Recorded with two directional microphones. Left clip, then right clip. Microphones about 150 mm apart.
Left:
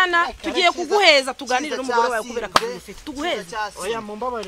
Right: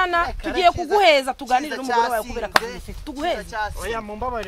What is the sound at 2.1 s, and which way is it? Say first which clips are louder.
Speech: even; 75° right (ahead or behind).